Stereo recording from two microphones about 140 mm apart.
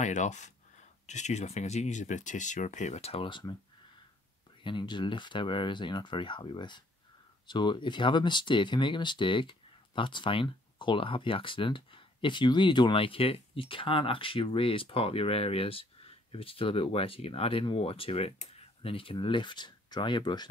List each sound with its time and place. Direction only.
0.0 s speech: 60° left (ahead or behind); by 3.5 s 35° left (ahead or behind)
4.6 s speech: 35° left (ahead or behind)